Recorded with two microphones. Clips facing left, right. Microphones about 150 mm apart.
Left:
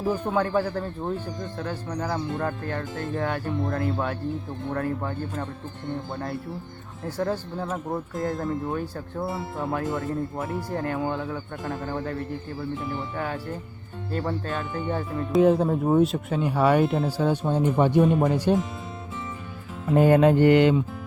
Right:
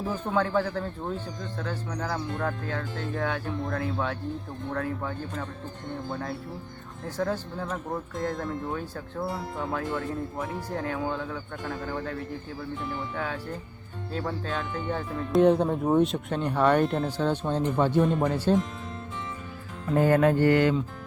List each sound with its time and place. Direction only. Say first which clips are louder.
0.0 s speech: left 3 dB; 10° left (ahead or behind)
19.9 s music: left 4 dB; 20° left (ahead or behind)